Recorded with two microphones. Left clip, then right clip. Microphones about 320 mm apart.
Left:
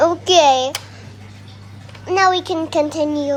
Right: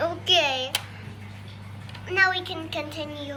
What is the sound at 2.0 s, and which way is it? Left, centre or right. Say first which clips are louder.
A child's voice: left 7 dB; centre.